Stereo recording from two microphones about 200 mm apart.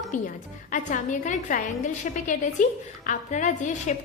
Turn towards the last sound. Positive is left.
turn(degrees=40)  # may be behind; listen again after turning